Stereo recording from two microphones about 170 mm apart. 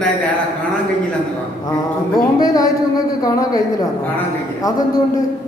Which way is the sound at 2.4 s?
20° left (ahead or behind).